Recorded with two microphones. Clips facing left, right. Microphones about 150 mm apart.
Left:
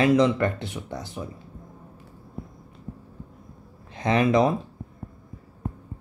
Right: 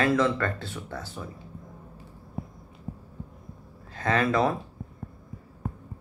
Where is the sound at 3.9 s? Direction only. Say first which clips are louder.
Left 4 dB; 15° left (ahead or behind).